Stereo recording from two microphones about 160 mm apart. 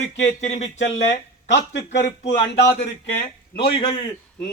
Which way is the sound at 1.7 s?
90° left.